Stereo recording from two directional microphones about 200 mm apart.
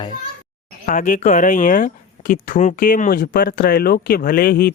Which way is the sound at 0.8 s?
40° left (ahead or behind).